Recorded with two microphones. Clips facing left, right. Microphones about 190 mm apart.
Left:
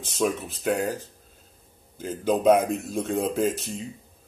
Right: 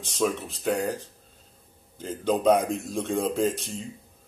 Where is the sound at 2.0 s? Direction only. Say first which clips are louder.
Left 1 dB; 5° left (ahead or behind).